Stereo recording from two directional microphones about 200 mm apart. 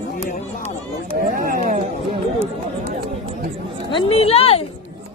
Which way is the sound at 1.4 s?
45° right (ahead or behind).